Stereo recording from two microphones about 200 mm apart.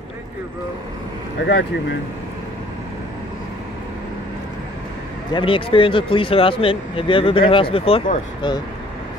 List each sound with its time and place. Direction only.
1.4 s speech: 60° left (ahead or behind)
5.3 s speech: 25° left (ahead or behind)